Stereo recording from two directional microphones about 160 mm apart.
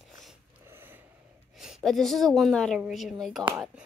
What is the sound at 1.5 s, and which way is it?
A woman's voice, centre (ahead or behind).